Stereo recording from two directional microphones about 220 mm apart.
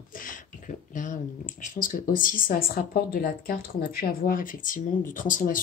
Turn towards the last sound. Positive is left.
turn(degrees=35)  # may be behind; listen again after turning